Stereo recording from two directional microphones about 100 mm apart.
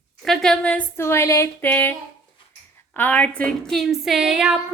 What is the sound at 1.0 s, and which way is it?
Speech, 25° left (ahead or behind).